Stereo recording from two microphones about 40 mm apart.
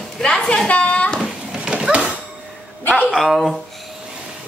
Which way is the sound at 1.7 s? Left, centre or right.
Centre.